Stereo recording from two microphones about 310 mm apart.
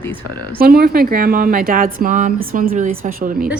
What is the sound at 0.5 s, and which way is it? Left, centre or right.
A woman's voice, right.